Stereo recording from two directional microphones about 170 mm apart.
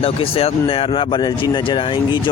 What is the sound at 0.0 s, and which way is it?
Speech, 35° left (ahead or behind).